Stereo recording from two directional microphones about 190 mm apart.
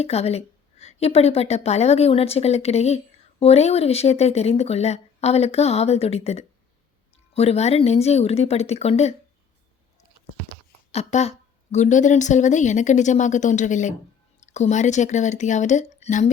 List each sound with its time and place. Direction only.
0.0 s a woman's voice: 35° left (ahead or behind)
10.9 s a woman's voice: 35° left (ahead or behind)